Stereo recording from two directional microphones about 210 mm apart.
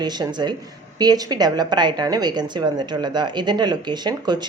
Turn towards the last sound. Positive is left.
turn(degrees=-20)  # may be behind; listen again after turning